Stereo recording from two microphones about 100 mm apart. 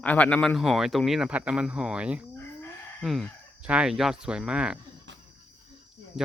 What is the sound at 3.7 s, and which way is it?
Speech, 5° right (ahead or behind).